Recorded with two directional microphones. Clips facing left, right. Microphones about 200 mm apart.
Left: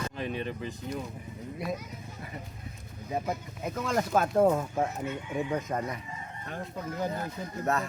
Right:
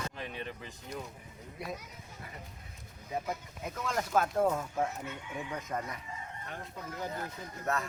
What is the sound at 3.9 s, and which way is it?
Speech, 30° left (ahead or behind).